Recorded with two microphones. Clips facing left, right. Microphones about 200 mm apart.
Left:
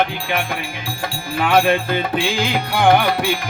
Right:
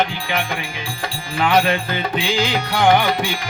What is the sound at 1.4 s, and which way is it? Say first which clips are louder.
Music: left 1 dB; 5° left (ahead or behind).